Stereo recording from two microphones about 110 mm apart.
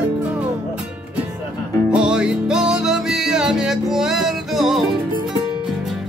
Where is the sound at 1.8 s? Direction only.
10° right (ahead or behind).